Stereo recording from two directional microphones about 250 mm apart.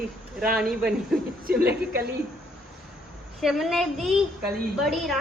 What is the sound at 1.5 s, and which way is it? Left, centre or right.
Speech, right.